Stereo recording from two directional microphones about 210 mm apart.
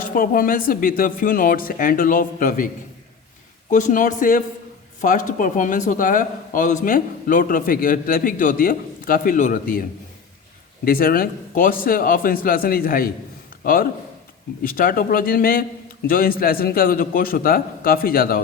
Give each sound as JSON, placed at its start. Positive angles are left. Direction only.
{"t": 0.0, "sound": "speech", "side_deg": 40}
{"t": 3.7, "sound": "speech", "side_deg": 35}
{"t": 10.8, "sound": "a man's voice", "side_deg": 45}
{"t": 14.6, "sound": "a man's voice", "side_deg": 40}